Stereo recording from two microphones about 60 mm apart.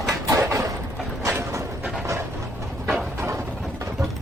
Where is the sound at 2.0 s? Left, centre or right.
Right.